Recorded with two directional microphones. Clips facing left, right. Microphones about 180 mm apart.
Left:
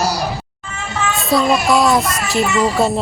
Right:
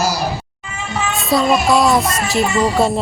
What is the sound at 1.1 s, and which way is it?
Speech, centre (ahead or behind).